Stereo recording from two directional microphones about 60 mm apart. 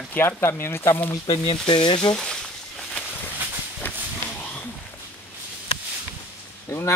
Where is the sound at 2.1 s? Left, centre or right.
Centre.